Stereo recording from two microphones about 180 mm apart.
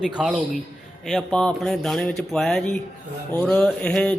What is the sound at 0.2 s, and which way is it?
Speech, centre (ahead or behind).